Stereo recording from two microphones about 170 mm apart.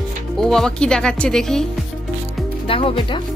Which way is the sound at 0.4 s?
5° left (ahead or behind).